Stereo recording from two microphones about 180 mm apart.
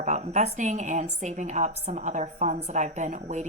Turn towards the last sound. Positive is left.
turn(degrees=-40)  # may be behind; listen again after turning